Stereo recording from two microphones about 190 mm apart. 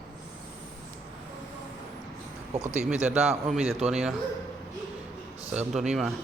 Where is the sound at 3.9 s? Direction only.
5° right (ahead or behind).